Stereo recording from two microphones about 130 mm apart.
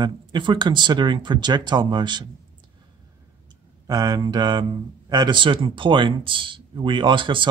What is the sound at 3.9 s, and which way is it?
Speech, 30° right (ahead or behind).